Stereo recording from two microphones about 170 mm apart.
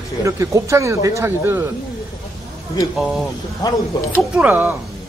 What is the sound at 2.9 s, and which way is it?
Speech, centre (ahead or behind).